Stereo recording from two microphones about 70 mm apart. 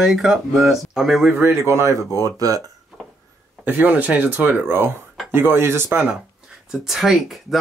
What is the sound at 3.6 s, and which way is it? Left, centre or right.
Speech, right.